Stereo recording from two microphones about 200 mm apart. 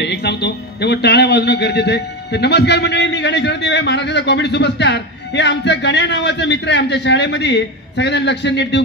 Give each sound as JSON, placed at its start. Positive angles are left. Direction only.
{"t": 0.0, "sound": "speech", "side_deg": 55}